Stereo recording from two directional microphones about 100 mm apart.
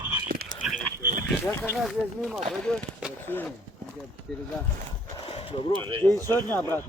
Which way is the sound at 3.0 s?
5° right (ahead or behind).